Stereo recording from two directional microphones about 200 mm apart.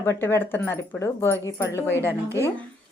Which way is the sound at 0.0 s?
10° left (ahead or behind).